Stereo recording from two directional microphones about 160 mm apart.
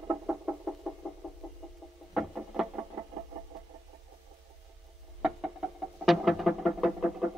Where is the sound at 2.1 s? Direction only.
5° right (ahead or behind).